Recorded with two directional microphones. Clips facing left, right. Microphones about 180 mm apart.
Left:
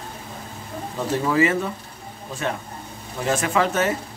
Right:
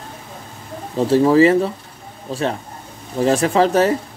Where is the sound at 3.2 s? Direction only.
35° right (ahead or behind).